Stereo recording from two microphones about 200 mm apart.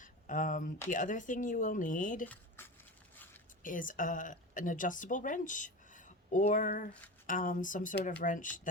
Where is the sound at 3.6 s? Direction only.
40° left (ahead or behind).